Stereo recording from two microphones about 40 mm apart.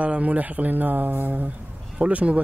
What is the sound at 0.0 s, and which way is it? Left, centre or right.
Speech, right.